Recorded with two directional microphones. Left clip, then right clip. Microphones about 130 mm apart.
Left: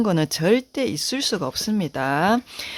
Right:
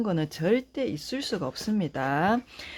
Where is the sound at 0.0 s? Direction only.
45° left (ahead or behind).